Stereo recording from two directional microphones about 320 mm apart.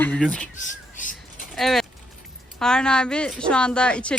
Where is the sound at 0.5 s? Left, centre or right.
Left.